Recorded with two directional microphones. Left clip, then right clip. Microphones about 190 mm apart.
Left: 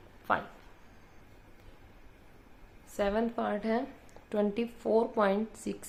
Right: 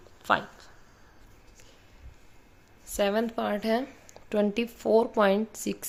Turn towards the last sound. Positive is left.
turn(degrees=-40)  # may be behind; listen again after turning